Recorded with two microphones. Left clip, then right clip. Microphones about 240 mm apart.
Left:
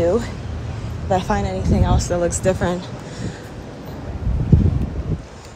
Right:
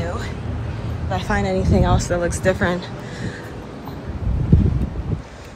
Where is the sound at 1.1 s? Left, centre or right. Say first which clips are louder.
Left 4 dB; left.